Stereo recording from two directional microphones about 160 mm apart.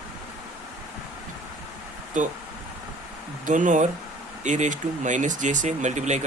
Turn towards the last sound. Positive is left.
turn(degrees=-45)  # may be behind; listen again after turning